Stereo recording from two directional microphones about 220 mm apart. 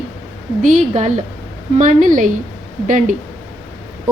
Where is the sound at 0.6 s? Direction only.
35° right (ahead or behind).